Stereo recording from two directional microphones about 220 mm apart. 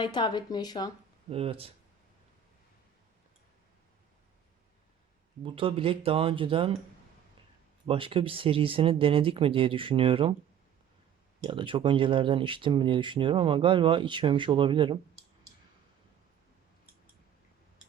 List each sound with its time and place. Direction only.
0.0 s speech: 20° left (ahead or behind)
1.3 s speech: 25° right (ahead or behind)
5.4 s speech: 25° right (ahead or behind)
7.9 s speech: 25° right (ahead or behind)
11.4 s speech: 20° right (ahead or behind)